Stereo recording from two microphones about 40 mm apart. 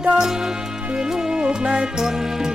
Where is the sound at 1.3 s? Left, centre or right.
Right.